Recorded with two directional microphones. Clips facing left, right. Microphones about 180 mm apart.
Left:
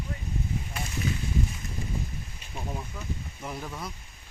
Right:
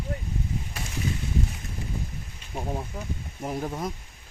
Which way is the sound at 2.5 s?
35° right (ahead or behind).